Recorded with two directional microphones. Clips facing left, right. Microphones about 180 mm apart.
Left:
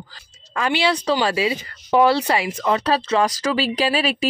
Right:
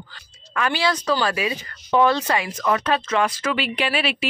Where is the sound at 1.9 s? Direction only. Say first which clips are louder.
Left 2 dB; 15° left (ahead or behind).